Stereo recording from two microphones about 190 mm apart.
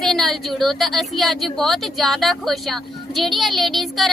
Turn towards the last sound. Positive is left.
turn(degrees=0)  # may be behind; listen again after turning